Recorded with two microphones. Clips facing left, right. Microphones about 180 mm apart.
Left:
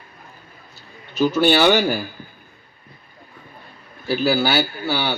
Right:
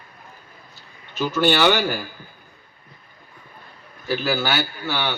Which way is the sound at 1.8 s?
40° left (ahead or behind).